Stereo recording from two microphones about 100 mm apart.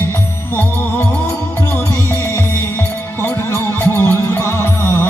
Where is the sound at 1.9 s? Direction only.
30° left (ahead or behind).